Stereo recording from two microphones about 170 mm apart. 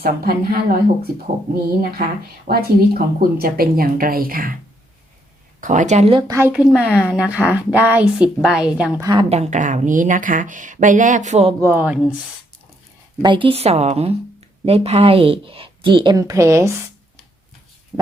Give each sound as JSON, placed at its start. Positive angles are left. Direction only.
{"t": 0.0, "sound": "speech", "side_deg": -60}
{"t": 2.5, "sound": "speech", "side_deg": -65}
{"t": 5.5, "sound": "speech", "side_deg": -50}
{"t": 6.2, "sound": "a woman's voice", "side_deg": -15}
{"t": 6.5, "sound": "a woman's voice", "side_deg": -5}
{"t": 9.0, "sound": "a woman's voice", "side_deg": -25}
{"t": 9.3, "sound": "speech", "side_deg": -40}
{"t": 11.6, "sound": "a woman's voice", "side_deg": -10}
{"t": 13.2, "sound": "a woman's voice", "side_deg": -30}